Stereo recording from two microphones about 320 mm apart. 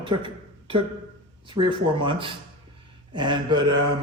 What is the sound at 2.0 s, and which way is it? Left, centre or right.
A man's voice, centre.